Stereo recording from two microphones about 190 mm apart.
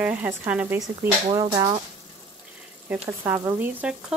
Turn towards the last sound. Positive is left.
turn(degrees=-5)  # may be behind; listen again after turning